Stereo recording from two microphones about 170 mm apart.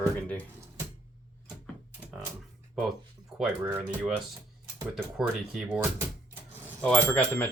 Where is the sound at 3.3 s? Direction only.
10° right (ahead or behind).